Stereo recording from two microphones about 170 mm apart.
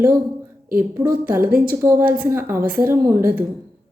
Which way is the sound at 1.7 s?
15° right (ahead or behind).